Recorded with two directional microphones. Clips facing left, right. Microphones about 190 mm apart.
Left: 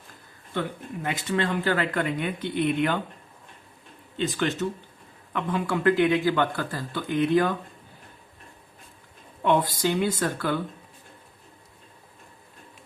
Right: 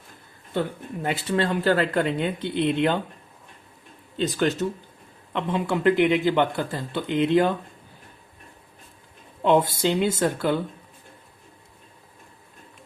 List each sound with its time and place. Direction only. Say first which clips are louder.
1.0 s a man's voice: right 3 dB; 30° right (ahead or behind)
4.2 s speech: right 3 dB; 40° right (ahead or behind)
5.3 s a man's voice: right 2 dB; 25° right (ahead or behind)
9.4 s a man's voice: right 3 dB; 25° right (ahead or behind)